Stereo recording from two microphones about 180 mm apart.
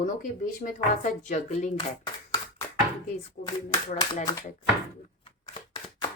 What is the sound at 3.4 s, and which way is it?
Speech, 50° left (ahead or behind).